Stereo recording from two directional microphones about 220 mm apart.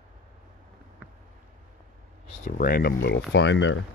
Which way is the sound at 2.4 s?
40° left (ahead or behind).